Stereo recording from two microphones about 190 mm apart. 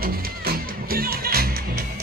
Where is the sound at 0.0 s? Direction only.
50° right (ahead or behind).